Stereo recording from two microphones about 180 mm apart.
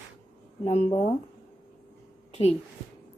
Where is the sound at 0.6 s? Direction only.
35° left (ahead or behind).